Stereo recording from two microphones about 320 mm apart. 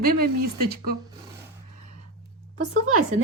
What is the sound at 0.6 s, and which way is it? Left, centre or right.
Speech, right.